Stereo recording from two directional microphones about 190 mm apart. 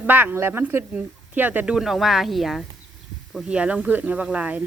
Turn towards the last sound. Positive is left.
turn(degrees=-5)  # may be behind; listen again after turning